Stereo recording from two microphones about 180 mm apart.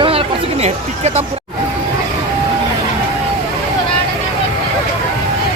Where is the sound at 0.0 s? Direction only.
30° right (ahead or behind).